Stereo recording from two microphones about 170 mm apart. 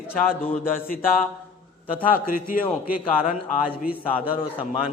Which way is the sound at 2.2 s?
55° left (ahead or behind).